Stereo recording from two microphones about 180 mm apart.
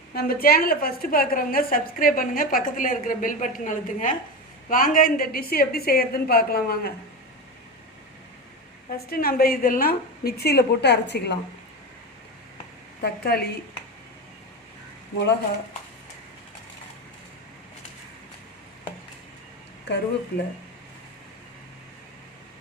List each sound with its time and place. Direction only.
0.1 s a woman's voice: 55° left (ahead or behind)
9.0 s a woman's voice: 55° left (ahead or behind)
13.0 s a woman's voice: 60° left (ahead or behind)
19.9 s speech: 75° left (ahead or behind)